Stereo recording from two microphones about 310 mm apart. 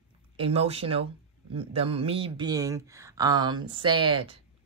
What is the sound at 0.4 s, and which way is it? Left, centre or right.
Speech, centre.